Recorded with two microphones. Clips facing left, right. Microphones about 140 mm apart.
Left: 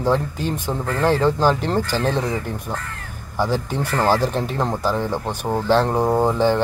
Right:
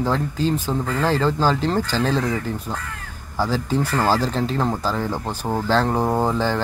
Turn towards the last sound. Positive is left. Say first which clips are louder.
# left 3 dB
turn(degrees=15)  # may be behind; listen again after turning